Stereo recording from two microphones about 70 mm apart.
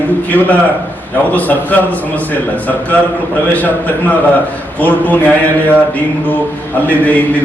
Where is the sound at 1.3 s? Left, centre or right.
Left.